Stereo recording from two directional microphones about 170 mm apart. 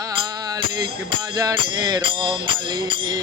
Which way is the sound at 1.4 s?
20° right (ahead or behind).